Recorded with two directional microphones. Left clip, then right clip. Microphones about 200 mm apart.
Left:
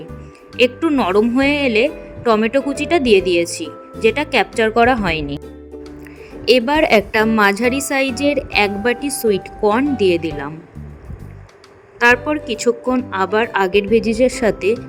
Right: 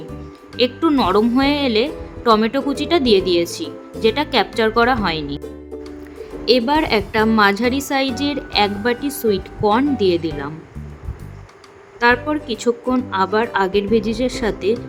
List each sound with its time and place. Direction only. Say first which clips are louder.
0.5 s a woman's voice: left 2 dB; 15° left (ahead or behind)
6.4 s a woman's voice: left 2 dB; 20° left (ahead or behind)
11.9 s a woman's voice: left 2 dB; 20° left (ahead or behind)